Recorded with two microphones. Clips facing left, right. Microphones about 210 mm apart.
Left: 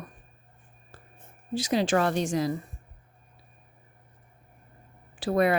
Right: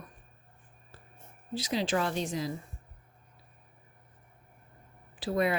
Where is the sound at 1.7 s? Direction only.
60° left (ahead or behind).